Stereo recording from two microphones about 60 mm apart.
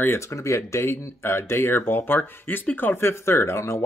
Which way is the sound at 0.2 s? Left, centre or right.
Left.